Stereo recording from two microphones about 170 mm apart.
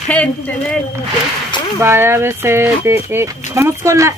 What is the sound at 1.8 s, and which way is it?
Speech, 15° right (ahead or behind).